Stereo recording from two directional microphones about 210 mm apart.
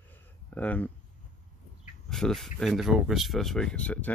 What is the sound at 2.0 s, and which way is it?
Speech, centre (ahead or behind).